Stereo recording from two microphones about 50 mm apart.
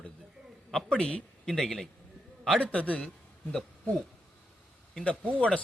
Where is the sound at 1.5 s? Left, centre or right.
Centre.